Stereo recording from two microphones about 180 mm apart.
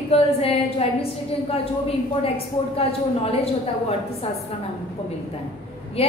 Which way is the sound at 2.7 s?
30° left (ahead or behind).